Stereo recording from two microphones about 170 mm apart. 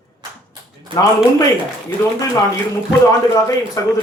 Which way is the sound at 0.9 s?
30° right (ahead or behind).